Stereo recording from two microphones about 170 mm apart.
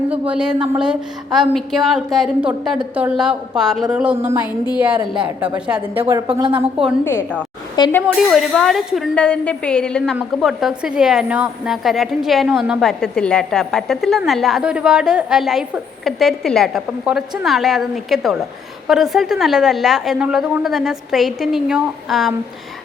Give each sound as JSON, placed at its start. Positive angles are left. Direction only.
{"t": 0.1, "sound": "a woman's voice", "side_deg": -5}
{"t": 6.4, "sound": "a woman's voice", "side_deg": -30}
{"t": 7.0, "sound": "a woman's voice", "side_deg": 15}
{"t": 8.0, "sound": "a woman's voice", "side_deg": 0}